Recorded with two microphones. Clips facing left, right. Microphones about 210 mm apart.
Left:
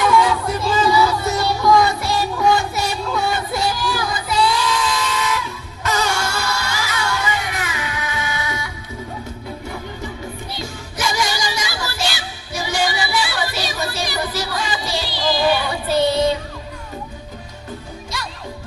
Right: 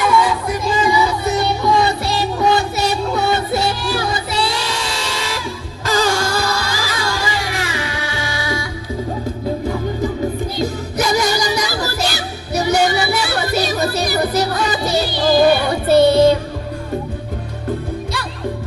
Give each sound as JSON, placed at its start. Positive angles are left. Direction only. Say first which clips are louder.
{"t": 0.4, "sound": "music", "louder": "right 1 dB", "side_deg": -15}
{"t": 10.6, "sound": "music", "louder": "right 7 dB", "side_deg": -40}